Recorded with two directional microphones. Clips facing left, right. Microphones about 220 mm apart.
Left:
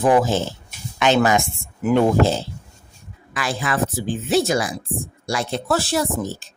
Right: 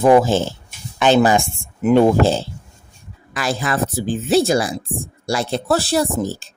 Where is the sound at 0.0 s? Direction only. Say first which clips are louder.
Right 4 dB; 25° right (ahead or behind).